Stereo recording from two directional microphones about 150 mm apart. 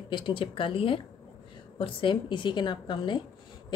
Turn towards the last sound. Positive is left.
turn(degrees=30)  # may be behind; listen again after turning